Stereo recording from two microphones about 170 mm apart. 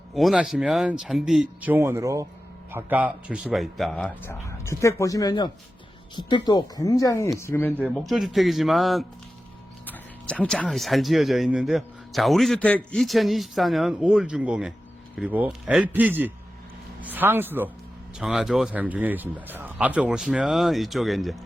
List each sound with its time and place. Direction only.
0.1 s speech: centre (ahead or behind)
4.4 s speech: 15° left (ahead or behind)
7.8 s a man's voice: centre (ahead or behind)